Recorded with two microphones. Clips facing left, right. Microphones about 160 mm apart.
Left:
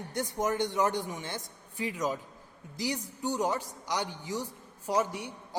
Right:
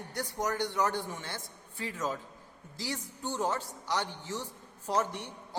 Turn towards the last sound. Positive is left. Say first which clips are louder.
# left 2 dB
turn(degrees=10)  # may be behind; listen again after turning